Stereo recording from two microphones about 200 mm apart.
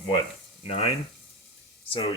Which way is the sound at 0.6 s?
30° left (ahead or behind).